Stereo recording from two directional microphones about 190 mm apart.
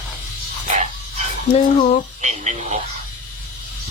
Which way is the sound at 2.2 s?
35° right (ahead or behind).